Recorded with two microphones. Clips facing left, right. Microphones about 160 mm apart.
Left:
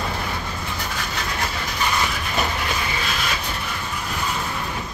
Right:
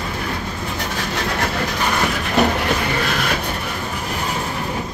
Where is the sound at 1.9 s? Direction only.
55° right (ahead or behind).